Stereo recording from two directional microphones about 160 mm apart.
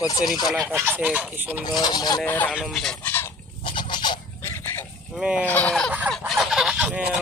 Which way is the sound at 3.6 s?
30° left (ahead or behind).